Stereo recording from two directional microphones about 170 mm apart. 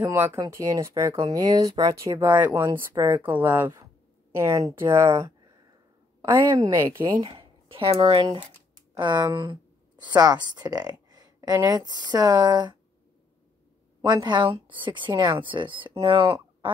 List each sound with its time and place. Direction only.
0.0 s speech: 10° right (ahead or behind)
6.2 s a woman's voice: 20° right (ahead or behind)
14.0 s a woman's voice: 25° right (ahead or behind)